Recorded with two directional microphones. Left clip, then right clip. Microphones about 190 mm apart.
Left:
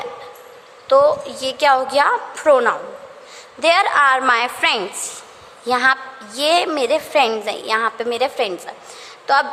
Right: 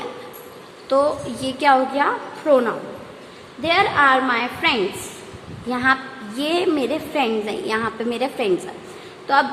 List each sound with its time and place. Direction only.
0.9 s a woman's voice: 25° left (ahead or behind)